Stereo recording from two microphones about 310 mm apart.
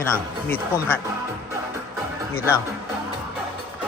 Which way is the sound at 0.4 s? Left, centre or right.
Centre.